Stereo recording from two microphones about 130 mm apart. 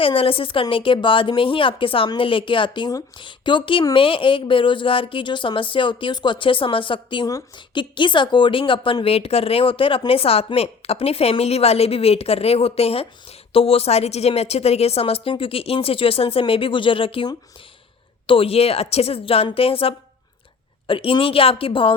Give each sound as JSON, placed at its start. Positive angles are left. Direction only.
{"t": 0.0, "sound": "a woman's voice", "side_deg": 45}
{"t": 18.3, "sound": "a woman's voice", "side_deg": 45}